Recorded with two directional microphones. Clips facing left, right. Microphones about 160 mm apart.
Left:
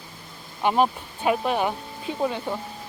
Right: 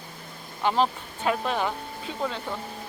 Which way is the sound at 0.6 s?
15° left (ahead or behind).